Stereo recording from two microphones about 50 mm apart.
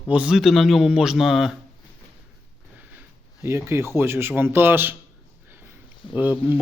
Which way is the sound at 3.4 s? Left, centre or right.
Right.